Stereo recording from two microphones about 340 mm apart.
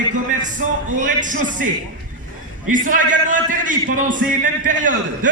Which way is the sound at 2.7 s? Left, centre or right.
Right.